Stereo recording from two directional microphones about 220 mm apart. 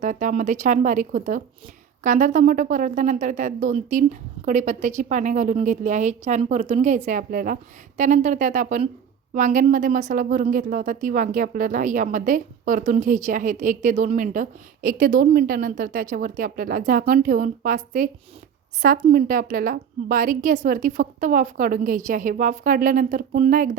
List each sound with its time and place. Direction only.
0.0 s speech: 35° right (ahead or behind)
19.1 s speech: 40° right (ahead or behind)